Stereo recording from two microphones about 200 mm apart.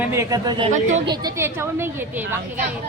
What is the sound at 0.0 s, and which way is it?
A woman's voice, 15° right (ahead or behind).